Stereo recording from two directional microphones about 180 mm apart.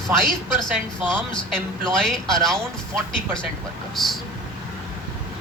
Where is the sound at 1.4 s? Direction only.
5° left (ahead or behind).